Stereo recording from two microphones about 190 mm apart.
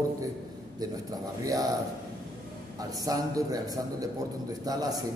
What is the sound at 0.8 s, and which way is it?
Speech, 20° right (ahead or behind).